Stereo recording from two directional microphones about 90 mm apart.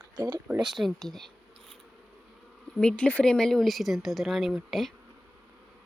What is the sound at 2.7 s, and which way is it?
Speech, 15° left (ahead or behind).